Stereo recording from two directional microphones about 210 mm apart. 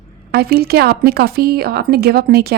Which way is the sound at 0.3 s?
50° right (ahead or behind).